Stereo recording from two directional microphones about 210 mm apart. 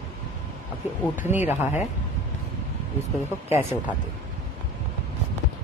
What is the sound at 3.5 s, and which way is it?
Speech, 10° right (ahead or behind).